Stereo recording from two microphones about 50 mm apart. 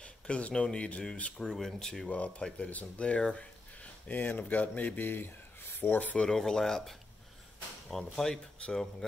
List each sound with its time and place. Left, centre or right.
0.0 s speech: left
1.4 s speech: centre
2.0 s speech: left
3.8 s speech: left
6.3 s speech: centre